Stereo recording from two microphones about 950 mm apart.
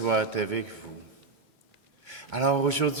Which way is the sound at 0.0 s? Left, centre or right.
Right.